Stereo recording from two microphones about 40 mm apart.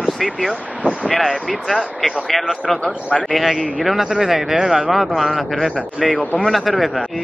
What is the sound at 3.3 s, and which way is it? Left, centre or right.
A man's voice, centre.